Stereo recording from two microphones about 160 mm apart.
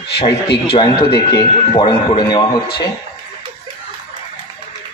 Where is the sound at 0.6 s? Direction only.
35° left (ahead or behind).